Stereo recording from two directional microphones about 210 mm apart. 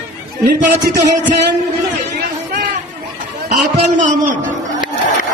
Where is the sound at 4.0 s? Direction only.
35° right (ahead or behind).